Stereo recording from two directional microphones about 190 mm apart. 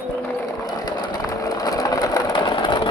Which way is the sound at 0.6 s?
20° left (ahead or behind).